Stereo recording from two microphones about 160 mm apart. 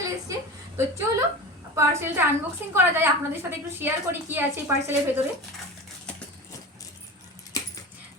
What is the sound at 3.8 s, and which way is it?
Speech, 15° right (ahead or behind).